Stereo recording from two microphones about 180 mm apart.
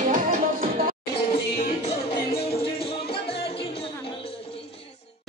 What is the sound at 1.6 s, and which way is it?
Music, 35° left (ahead or behind).